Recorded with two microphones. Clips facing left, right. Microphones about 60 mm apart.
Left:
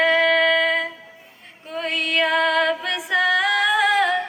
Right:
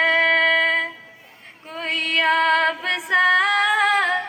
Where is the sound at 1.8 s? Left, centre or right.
Right.